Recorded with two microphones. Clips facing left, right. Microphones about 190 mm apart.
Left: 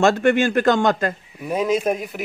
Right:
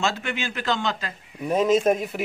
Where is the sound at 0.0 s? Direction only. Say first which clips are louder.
Left 11 dB; 50° left (ahead or behind).